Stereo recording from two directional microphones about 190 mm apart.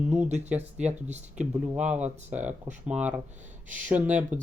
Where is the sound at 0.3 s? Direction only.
35° right (ahead or behind).